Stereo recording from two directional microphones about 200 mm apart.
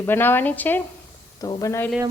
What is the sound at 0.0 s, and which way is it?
A woman's voice, 10° left (ahead or behind).